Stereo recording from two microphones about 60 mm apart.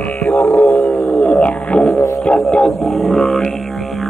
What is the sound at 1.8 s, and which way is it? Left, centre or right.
Didgeridoo, centre.